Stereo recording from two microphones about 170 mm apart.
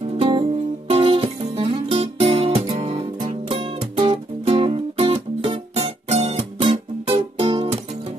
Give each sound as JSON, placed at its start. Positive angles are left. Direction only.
{"t": 0.2, "sound": "music", "side_deg": -35}
{"t": 2.8, "sound": "music", "side_deg": -40}